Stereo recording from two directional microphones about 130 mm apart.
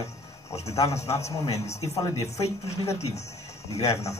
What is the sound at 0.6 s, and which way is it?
Speech, 25° left (ahead or behind).